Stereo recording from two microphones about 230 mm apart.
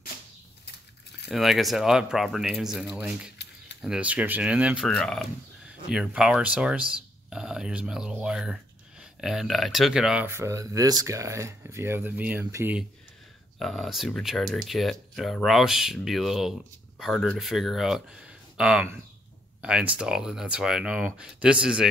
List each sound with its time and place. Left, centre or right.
1.3 s speech: centre
3.4 s keys jangling: left
3.8 s speech: centre
13.6 s speech: centre